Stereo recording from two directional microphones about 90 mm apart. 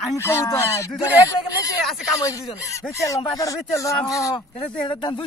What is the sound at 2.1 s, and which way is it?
Speech, 35° left (ahead or behind).